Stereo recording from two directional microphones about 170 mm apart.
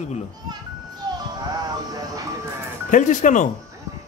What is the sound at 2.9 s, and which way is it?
Speech, 50° left (ahead or behind).